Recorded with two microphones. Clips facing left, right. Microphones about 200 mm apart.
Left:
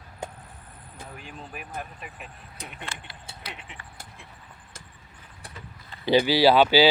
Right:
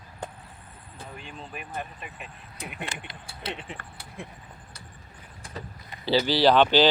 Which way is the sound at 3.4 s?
30° right (ahead or behind).